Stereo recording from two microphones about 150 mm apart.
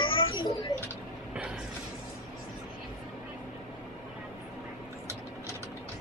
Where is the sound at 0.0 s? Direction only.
35° left (ahead or behind).